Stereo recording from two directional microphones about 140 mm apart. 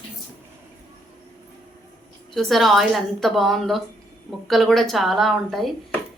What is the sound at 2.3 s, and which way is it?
Speech, centre (ahead or behind).